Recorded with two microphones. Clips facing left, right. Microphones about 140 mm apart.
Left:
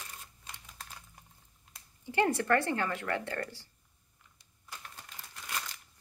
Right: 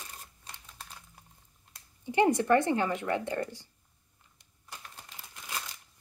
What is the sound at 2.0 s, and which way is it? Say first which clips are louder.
Speech: right 4 dB; 15° right (ahead or behind).